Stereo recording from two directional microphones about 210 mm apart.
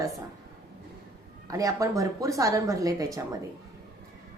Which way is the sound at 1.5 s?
15° right (ahead or behind).